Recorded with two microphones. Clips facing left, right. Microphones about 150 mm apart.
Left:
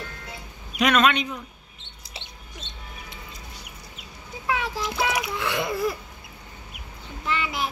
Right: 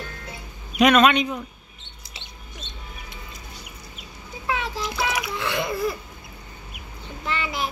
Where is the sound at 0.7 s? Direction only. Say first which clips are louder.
Right 4 dB; 20° right (ahead or behind).